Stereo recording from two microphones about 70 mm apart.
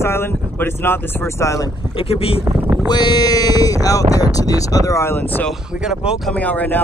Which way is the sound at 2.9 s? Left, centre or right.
Left.